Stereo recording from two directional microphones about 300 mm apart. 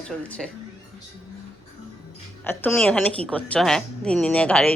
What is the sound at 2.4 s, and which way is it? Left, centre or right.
Speech, centre.